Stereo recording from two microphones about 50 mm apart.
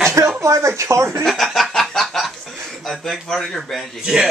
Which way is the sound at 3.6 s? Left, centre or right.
Centre.